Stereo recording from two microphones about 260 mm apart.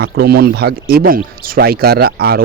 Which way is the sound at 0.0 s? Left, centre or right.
Right.